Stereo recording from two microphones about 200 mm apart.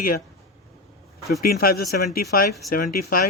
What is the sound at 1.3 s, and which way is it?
Speech, 50° left (ahead or behind).